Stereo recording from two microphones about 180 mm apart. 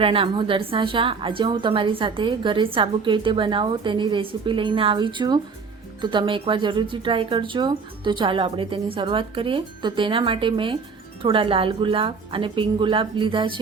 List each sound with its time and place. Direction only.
0.0 s a woman's voice: 30° right (ahead or behind)